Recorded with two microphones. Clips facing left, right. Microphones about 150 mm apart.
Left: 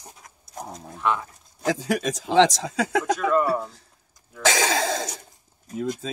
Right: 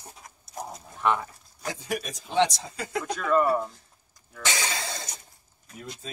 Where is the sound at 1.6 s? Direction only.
90° left.